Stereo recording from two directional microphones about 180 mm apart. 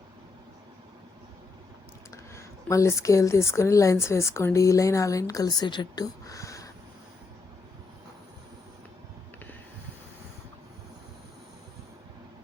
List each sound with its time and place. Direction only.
2.0 s speech: 15° left (ahead or behind)